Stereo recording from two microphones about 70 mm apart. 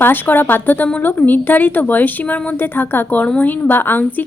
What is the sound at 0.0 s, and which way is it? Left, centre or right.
A woman's voice, left.